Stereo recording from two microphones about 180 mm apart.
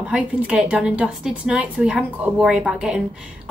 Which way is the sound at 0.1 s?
5° right (ahead or behind).